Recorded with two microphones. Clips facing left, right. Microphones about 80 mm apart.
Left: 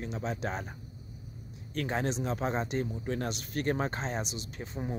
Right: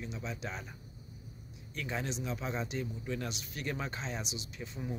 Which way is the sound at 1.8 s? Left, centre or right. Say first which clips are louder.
Left 6 dB; left.